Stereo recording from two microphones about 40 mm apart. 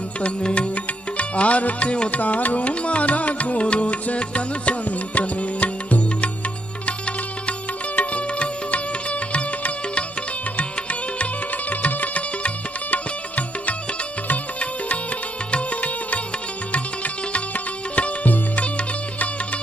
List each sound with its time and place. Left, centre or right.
0.2 s music: left
7.9 s music: left